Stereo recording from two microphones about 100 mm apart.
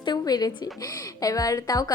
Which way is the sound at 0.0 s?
45° left (ahead or behind).